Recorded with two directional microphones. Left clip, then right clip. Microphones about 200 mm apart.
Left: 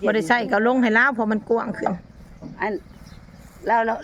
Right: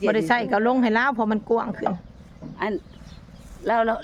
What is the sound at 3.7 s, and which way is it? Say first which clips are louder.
Speech: left 1 dB; 60° right (ahead or behind).